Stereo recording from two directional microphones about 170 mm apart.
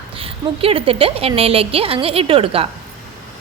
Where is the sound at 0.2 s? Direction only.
35° right (ahead or behind).